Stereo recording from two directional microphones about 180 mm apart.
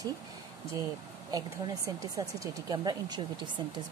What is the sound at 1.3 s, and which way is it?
Speech, 20° right (ahead or behind).